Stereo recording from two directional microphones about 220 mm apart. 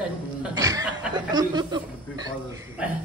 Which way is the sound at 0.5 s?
15° right (ahead or behind).